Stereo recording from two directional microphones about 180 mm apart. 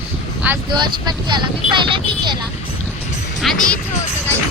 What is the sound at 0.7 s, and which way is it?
Speech, 25° right (ahead or behind).